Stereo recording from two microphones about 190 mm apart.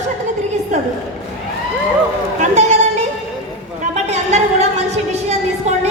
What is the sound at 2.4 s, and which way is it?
Chatter, 40° right (ahead or behind).